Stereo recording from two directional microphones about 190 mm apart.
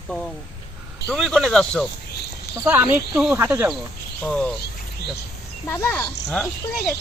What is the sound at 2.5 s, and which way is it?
Speech, 10° right (ahead or behind).